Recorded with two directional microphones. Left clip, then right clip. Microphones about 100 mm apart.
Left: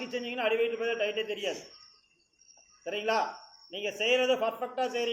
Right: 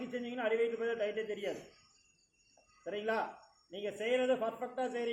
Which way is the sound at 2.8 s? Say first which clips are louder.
Left 6 dB; 15° right (ahead or behind).